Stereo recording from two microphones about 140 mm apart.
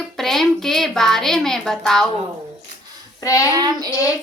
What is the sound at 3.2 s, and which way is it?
Speech, 25° left (ahead or behind).